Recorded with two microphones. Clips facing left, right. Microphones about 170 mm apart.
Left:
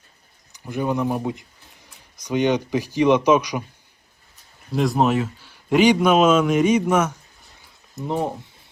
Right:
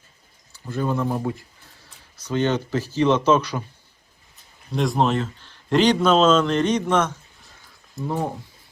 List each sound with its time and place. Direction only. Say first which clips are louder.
0.5 s speech: left 1 dB; 15° left (ahead or behind)
4.7 s a man's voice: left 2 dB; 5° left (ahead or behind)
7.9 s speech: left 2 dB; 20° left (ahead or behind)